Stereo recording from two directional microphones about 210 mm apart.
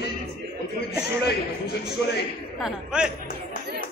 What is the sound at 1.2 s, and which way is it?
A man's voice, 50° left (ahead or behind).